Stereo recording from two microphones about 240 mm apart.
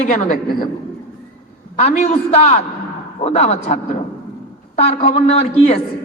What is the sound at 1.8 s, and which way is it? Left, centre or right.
A woman's voice, left.